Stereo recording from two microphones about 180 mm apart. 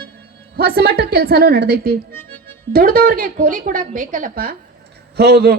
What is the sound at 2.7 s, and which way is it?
A woman's voice, 55° right (ahead or behind).